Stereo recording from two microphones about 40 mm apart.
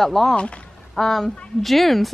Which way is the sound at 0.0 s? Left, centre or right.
Centre.